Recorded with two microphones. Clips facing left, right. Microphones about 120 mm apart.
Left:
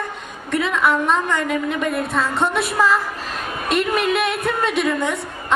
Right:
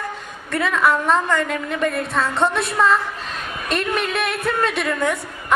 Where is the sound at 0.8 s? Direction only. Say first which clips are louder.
Right 2 dB; centre (ahead or behind).